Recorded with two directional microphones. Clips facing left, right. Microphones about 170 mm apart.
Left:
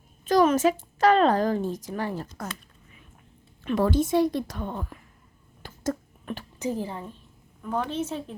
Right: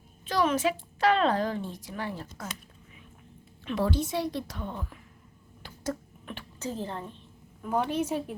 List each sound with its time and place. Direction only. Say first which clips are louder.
0.3 s a woman's voice: left 6 dB; 45° left (ahead or behind)
3.6 s a woman's voice: left 5 dB; 50° left (ahead or behind)
5.6 s finger snapping: left 4 dB; 45° left (ahead or behind)
6.6 s a woman's voice: left 4 dB; 15° left (ahead or behind)
7.9 s a woman's voice: right 1 dB; 10° right (ahead or behind)